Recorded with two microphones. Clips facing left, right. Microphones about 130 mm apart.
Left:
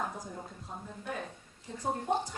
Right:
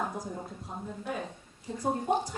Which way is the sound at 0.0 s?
10° right (ahead or behind).